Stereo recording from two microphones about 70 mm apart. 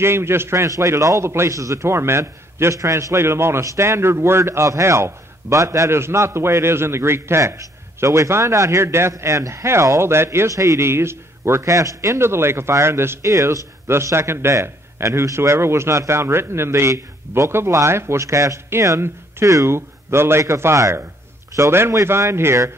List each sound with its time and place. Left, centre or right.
0.0 s a man's voice: right
9.1 s a man's voice: right
10.9 s a man's voice: right
13.8 s a man's voice: right